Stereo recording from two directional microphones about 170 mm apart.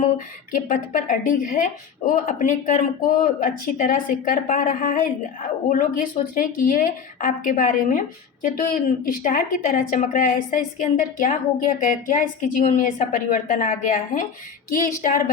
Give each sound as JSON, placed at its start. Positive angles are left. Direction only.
{"t": 0.5, "sound": "a woman's voice", "side_deg": 50}